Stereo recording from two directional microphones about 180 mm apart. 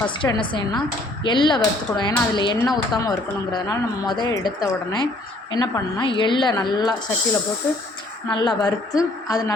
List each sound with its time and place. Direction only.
0.2 s speech: 25° left (ahead or behind)
8.3 s speech: 25° left (ahead or behind)